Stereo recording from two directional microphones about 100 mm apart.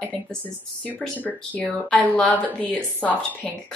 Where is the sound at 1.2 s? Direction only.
15° left (ahead or behind).